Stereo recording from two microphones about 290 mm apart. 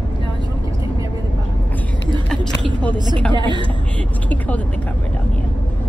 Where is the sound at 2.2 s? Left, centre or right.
Centre.